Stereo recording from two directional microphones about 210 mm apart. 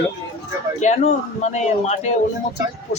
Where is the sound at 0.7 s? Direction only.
35° left (ahead or behind).